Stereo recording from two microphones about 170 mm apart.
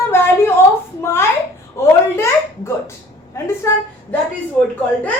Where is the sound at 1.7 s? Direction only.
15° left (ahead or behind).